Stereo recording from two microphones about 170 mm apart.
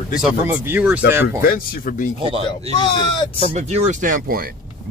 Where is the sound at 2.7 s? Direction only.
25° left (ahead or behind).